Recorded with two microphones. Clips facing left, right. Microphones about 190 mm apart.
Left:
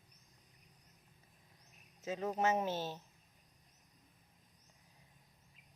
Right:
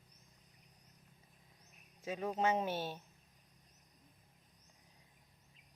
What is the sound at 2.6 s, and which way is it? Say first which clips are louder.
Speech: even; 10° right (ahead or behind).